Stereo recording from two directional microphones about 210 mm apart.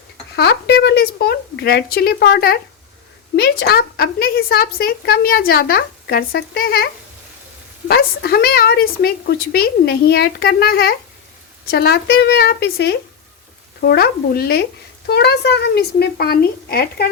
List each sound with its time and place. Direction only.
0.3 s speech: 55° left (ahead or behind)